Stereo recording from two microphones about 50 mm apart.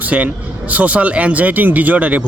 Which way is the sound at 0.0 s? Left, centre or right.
Right.